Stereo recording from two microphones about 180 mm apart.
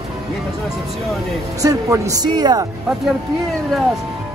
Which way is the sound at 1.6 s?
20° right (ahead or behind).